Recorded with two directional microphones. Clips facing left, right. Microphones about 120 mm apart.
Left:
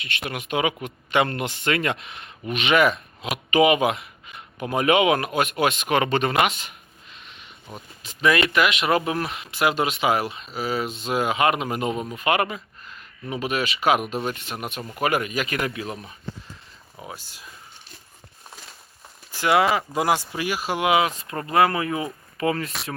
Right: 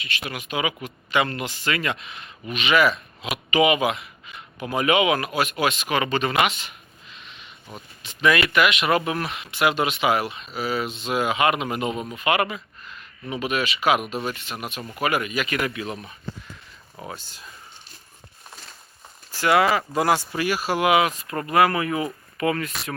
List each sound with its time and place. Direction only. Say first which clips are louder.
0.3 s a man's voice: left 3 dB; 55° left (ahead or behind)
3.3 s speech: left 2 dB; 40° left (ahead or behind)
8.0 s speech: even; 30° left (ahead or behind)
14.8 s speech: left 1 dB; centre (ahead or behind)
15.0 s speech: left 1 dB; 40° left (ahead or behind)
17.0 s speech: right 2 dB; 5° left (ahead or behind)
19.3 s a sound: even; 20° left (ahead or behind)
19.7 s speech: right 1 dB; 15° left (ahead or behind)